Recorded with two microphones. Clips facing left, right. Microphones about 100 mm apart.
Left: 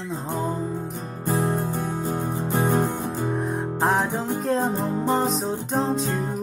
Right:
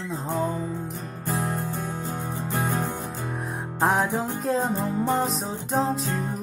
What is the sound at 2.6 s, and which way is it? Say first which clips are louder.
Music: left 7 dB; 15° left (ahead or behind).